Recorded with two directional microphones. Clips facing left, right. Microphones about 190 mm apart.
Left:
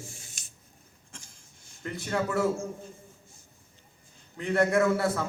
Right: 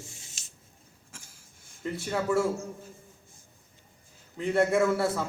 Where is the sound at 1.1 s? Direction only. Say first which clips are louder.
Left 2 dB; 5° right (ahead or behind).